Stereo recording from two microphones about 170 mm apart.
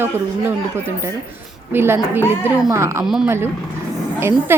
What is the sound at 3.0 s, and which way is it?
Speech, centre (ahead or behind).